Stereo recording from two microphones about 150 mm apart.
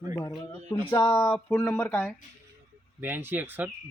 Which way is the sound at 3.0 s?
15° right (ahead or behind).